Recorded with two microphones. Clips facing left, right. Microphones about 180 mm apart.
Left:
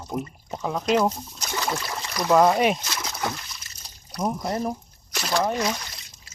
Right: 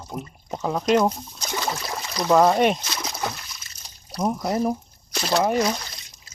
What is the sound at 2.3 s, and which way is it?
Speech, centre (ahead or behind).